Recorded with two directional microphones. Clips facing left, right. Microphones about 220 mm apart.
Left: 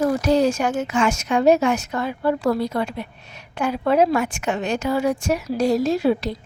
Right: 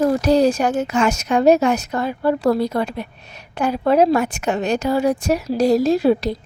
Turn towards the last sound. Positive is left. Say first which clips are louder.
# right 3 dB
turn(degrees=-40)  # may be behind; listen again after turning